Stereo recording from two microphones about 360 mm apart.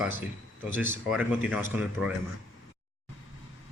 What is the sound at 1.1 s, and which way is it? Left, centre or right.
A man's voice, centre.